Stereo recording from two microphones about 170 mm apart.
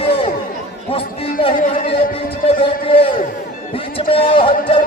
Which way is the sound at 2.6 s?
35° left (ahead or behind).